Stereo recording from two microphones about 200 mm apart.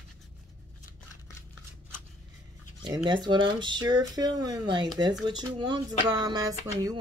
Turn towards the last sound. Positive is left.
turn(degrees=-20)  # may be behind; listen again after turning